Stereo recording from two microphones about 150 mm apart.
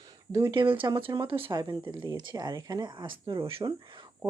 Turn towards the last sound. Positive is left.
turn(degrees=-30)  # may be behind; listen again after turning